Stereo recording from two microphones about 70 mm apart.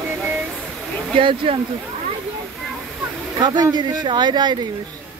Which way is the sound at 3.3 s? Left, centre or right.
Right.